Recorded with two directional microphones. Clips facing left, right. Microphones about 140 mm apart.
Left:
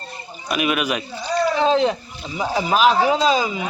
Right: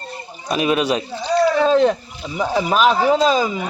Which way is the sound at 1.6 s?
50° right (ahead or behind).